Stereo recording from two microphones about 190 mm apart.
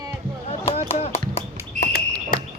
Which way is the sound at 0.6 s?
30° left (ahead or behind).